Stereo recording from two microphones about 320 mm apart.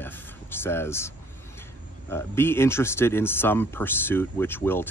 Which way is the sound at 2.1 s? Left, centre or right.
Centre.